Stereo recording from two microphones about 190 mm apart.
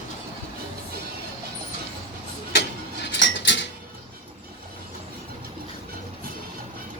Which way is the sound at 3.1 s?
70° left (ahead or behind).